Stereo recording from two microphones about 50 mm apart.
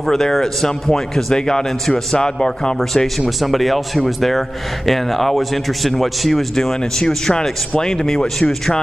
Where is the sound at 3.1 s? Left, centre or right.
Centre.